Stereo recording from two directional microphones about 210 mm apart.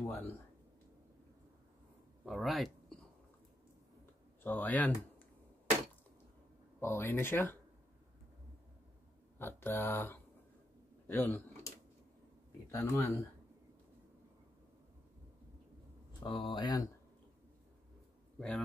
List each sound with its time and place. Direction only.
0.0 s speech: 10° left (ahead or behind)
2.2 s speech: centre (ahead or behind)
4.0 s a sound: 10° left (ahead or behind)
6.8 s speech: 10° left (ahead or behind)
9.4 s speech: 10° left (ahead or behind)
12.7 s speech: 10° left (ahead or behind)
16.2 s speech: 20° left (ahead or behind)